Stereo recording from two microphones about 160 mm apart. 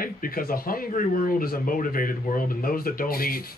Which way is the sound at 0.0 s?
65° left (ahead or behind).